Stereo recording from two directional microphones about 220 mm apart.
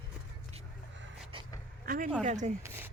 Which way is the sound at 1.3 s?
25° right (ahead or behind).